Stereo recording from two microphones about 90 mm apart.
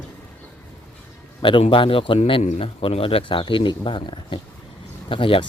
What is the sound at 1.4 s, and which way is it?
Speech, 70° left (ahead or behind).